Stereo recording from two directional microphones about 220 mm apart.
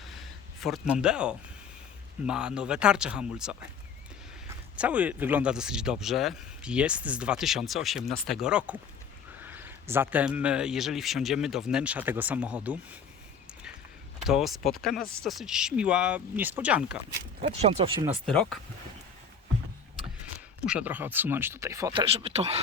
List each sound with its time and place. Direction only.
0.1 s a sound: centre (ahead or behind)
2.2 s speech: 5° right (ahead or behind)
14.3 s speech: centre (ahead or behind)
17.6 s speech: 25° right (ahead or behind)
18.3 s speech: centre (ahead or behind)
20.7 s speech: 5° right (ahead or behind); by 22.6 s 25° right (ahead or behind)